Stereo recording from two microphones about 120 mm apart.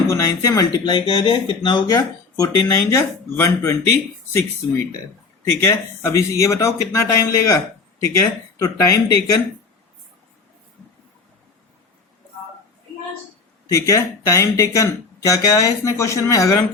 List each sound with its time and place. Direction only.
0.1 s speech: 25° left (ahead or behind)
5.6 s speech: 25° left (ahead or behind)
13.7 s speech: 25° left (ahead or behind)